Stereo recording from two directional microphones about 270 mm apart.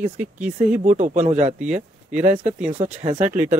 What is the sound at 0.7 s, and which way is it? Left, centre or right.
Speech, right.